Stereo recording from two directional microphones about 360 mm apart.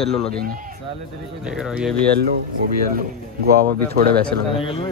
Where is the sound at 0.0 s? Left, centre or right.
Centre.